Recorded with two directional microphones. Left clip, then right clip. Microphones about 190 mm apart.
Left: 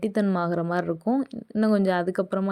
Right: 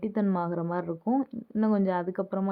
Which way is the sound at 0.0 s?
20° left (ahead or behind).